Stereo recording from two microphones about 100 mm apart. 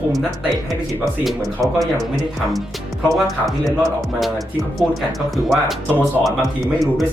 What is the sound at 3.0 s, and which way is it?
Speech, centre (ahead or behind).